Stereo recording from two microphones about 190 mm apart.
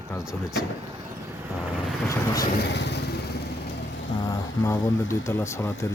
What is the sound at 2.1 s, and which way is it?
Speech, 20° left (ahead or behind).